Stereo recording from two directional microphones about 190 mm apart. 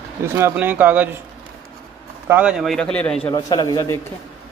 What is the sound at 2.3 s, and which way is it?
Speech, 5° right (ahead or behind).